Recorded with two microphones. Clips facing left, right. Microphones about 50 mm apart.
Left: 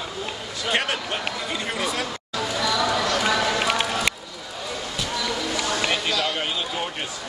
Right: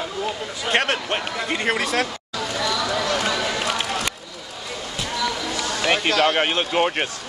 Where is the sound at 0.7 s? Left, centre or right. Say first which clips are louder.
Right 3 dB; right.